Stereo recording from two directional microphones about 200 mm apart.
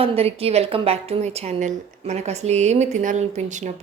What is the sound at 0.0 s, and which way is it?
A woman's voice, 30° right (ahead or behind).